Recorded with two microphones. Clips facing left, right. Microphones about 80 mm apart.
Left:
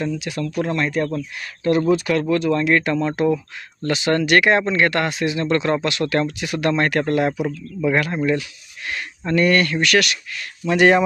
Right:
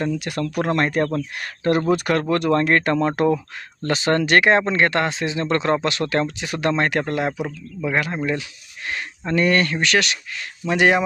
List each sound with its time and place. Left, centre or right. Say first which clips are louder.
0.0 s speech: right 1 dB; right
3.8 s speech: left 1 dB; right
10.7 s speech: left 3 dB; centre